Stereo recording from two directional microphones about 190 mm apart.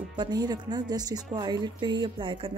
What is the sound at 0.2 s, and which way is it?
Speech, 20° right (ahead or behind).